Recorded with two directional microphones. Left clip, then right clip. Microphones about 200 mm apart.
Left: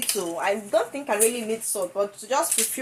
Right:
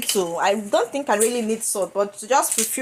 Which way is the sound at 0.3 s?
40° right (ahead or behind).